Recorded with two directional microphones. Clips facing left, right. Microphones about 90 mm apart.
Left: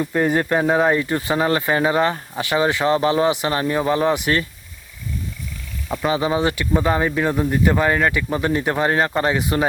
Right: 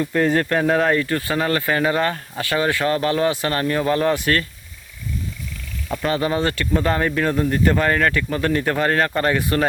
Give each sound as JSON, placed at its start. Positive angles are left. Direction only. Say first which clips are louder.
{"t": 0.0, "sound": "speech", "louder": "even", "side_deg": 15}
{"t": 5.9, "sound": "speech", "louder": "left 1 dB", "side_deg": 10}